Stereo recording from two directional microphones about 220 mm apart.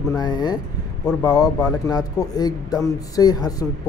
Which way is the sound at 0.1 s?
20° left (ahead or behind).